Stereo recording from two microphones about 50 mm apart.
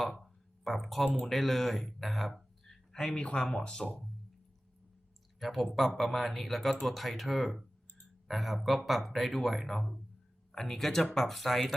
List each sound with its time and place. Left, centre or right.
0.0 s speech: centre
3.2 s speech: centre
5.4 s speech: centre